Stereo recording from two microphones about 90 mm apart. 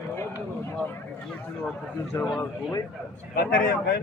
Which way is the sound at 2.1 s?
40° left (ahead or behind).